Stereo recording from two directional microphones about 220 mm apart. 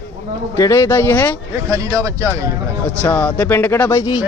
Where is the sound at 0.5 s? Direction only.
15° left (ahead or behind).